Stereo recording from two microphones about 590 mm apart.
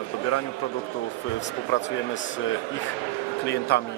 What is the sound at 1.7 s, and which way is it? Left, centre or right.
Speech, centre.